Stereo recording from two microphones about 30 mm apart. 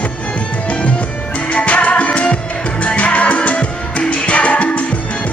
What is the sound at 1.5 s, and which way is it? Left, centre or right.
Music, left.